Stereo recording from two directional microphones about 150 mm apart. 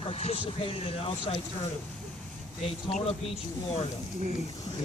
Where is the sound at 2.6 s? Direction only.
50° left (ahead or behind).